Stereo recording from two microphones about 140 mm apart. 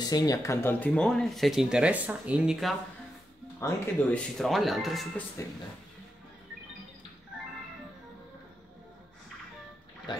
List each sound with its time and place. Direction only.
0.0 s speech: 30° left (ahead or behind); by 2.7 s 5° right (ahead or behind)
3.5 s speech: 15° left (ahead or behind)
4.4 s speech: centre (ahead or behind)
5.4 s speech: 20° left (ahead or behind)
10.1 s speech: 35° left (ahead or behind)